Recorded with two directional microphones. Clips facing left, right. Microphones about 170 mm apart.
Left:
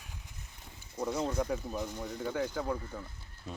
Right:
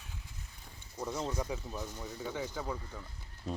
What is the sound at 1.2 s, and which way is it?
Speech, centre (ahead or behind).